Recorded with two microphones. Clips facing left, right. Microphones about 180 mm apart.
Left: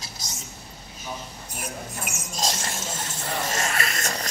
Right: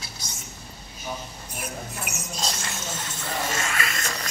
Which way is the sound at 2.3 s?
45° left (ahead or behind).